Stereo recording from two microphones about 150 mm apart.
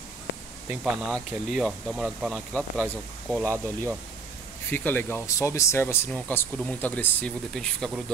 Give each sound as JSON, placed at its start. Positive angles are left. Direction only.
{"t": 0.7, "sound": "speech", "side_deg": 0}
{"t": 3.4, "sound": "speech", "side_deg": -20}
{"t": 4.6, "sound": "speech", "side_deg": 15}